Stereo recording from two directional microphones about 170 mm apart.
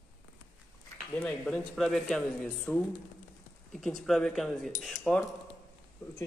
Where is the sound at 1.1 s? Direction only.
5° left (ahead or behind).